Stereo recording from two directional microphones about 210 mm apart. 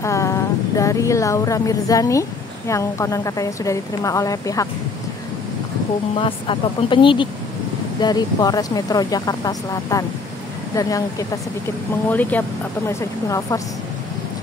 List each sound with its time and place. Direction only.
0.0 s a woman's voice: 15° left (ahead or behind)
6.1 s speech: 25° left (ahead or behind)